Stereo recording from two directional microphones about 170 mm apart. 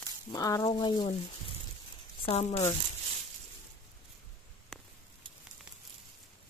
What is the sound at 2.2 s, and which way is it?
Speech, 40° left (ahead or behind).